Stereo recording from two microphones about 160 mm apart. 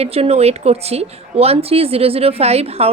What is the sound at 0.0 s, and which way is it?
Speech, 40° right (ahead or behind).